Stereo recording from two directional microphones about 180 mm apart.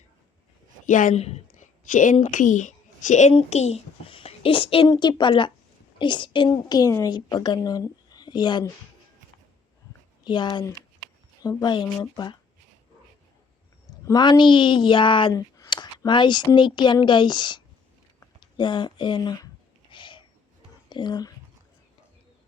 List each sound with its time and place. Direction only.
0.9 s a sound: 45° left (ahead or behind)
2.1 s a child's voice: 45° left (ahead or behind); by 8.7 s 25° left (ahead or behind)
10.2 s speech: 25° left (ahead or behind)
14.0 s speech: 20° left (ahead or behind)
19.9 s a sound: 25° left (ahead or behind)
20.9 s speech: 25° left (ahead or behind)